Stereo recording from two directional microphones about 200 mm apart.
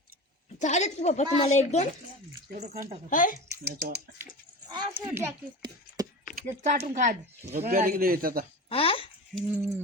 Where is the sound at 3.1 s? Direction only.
40° left (ahead or behind).